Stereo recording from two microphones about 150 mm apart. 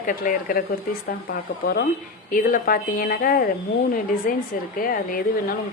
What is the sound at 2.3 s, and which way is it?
Speech, 65° left (ahead or behind).